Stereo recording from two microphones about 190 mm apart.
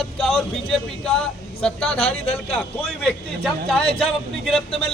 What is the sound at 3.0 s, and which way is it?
Speech, 5° left (ahead or behind).